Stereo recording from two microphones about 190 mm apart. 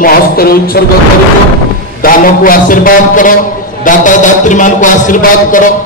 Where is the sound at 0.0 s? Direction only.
50° left (ahead or behind).